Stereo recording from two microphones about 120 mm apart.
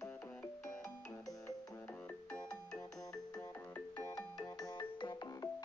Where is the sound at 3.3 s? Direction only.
25° left (ahead or behind).